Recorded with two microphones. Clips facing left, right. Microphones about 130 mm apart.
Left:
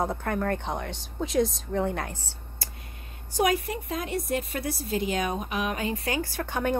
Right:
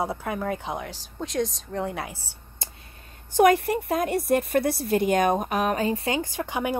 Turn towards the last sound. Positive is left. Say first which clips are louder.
# right 1 dB
turn(degrees=-10)  # may be behind; listen again after turning